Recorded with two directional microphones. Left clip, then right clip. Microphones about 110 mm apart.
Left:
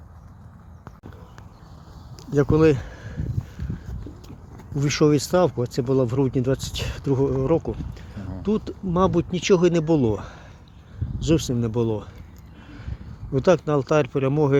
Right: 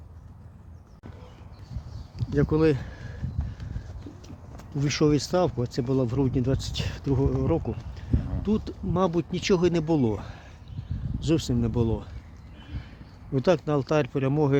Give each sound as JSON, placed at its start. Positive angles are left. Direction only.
{"t": 2.1, "sound": "a sound", "side_deg": 0}
{"t": 4.7, "sound": "speech", "side_deg": -10}
{"t": 13.3, "sound": "speech", "side_deg": -15}